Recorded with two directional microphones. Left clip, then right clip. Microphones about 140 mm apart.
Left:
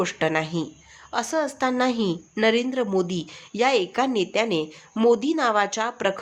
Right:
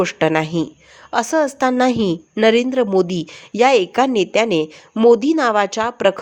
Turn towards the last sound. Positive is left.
turn(degrees=-50)  # may be behind; listen again after turning